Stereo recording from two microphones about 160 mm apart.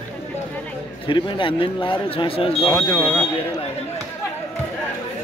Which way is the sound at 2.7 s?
15° left (ahead or behind).